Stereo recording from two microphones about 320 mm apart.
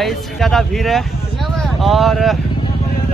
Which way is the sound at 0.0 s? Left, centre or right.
Centre.